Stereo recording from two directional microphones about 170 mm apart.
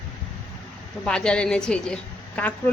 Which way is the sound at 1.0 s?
5° left (ahead or behind).